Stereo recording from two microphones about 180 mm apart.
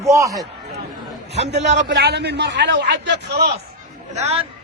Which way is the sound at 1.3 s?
75° right (ahead or behind).